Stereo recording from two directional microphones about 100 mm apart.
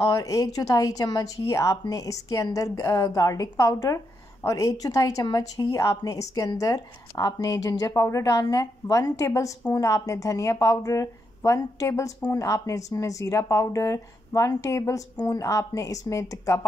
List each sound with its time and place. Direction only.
0.0 s a woman's voice: 35° left (ahead or behind)